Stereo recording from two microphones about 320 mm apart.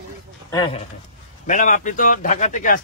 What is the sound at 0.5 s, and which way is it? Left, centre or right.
Speech, centre.